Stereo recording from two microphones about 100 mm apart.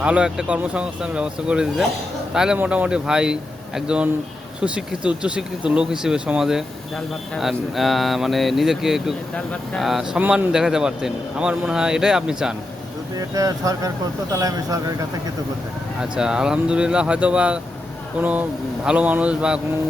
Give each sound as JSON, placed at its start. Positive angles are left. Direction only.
{"t": 0.0, "sound": "a man's voice", "side_deg": -10}
{"t": 9.3, "sound": "speech", "side_deg": 10}
{"t": 9.8, "sound": "a man's voice", "side_deg": -5}
{"t": 13.1, "sound": "speech", "side_deg": -35}
{"t": 16.0, "sound": "a man's voice", "side_deg": -5}